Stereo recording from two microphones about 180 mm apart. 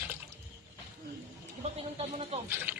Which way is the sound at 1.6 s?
35° right (ahead or behind).